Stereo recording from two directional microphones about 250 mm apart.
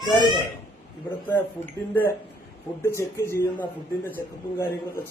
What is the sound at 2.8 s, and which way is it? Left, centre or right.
Speech, centre.